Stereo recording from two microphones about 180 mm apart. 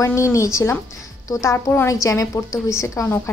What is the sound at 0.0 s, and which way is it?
A woman's voice, 15° left (ahead or behind).